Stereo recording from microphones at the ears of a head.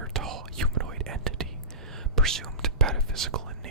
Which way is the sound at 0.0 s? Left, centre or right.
Right.